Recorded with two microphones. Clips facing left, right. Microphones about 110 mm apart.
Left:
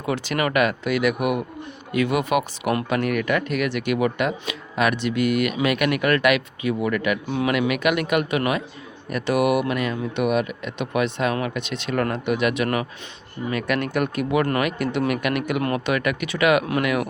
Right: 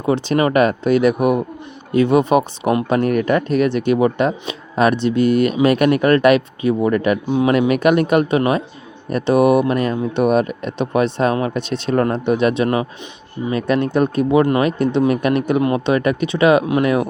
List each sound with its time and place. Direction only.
0.0 s speech: 30° right (ahead or behind)
7.3 s speech: 25° right (ahead or behind)
7.7 s speech: 35° right (ahead or behind)